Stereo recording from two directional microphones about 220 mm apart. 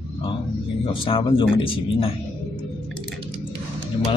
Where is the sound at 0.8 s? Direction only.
25° left (ahead or behind).